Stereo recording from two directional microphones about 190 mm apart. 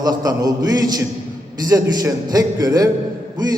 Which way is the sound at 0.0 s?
20° right (ahead or behind).